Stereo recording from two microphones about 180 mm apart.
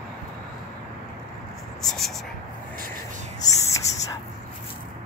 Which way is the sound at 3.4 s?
15° left (ahead or behind).